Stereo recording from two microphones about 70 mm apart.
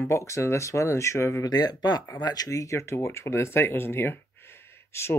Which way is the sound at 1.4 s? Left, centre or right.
Left.